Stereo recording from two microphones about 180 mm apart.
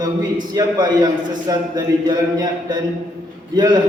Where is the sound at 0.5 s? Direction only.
25° right (ahead or behind).